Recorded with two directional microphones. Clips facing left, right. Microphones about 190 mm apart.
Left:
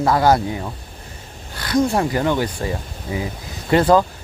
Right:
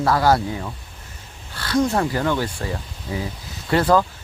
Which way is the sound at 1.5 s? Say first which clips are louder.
Left 2 dB; 15° left (ahead or behind).